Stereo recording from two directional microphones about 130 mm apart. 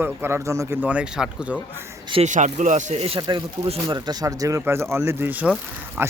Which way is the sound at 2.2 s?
70° right (ahead or behind).